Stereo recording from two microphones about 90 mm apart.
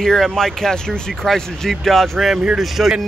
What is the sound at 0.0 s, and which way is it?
Speech, 5° left (ahead or behind).